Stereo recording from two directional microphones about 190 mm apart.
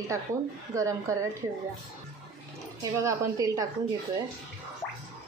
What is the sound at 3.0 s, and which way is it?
Speech, 15° right (ahead or behind).